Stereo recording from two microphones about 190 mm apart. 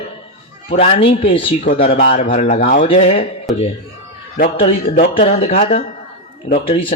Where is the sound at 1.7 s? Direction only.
40° left (ahead or behind).